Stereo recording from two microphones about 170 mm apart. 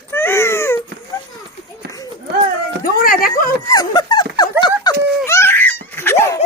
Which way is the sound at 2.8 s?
60° left (ahead or behind).